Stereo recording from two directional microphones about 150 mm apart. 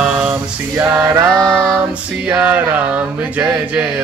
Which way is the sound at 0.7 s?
15° right (ahead or behind).